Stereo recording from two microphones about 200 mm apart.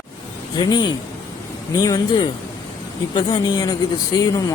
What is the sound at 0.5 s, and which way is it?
Speech, 20° left (ahead or behind).